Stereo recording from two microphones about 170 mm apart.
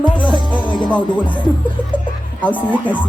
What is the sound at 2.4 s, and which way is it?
Speech, 10° left (ahead or behind).